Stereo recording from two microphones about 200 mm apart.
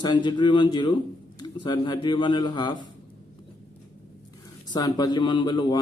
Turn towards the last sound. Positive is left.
turn(degrees=20)  # may be behind; listen again after turning